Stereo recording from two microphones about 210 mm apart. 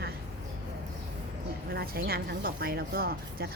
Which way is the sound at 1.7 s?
45° right (ahead or behind).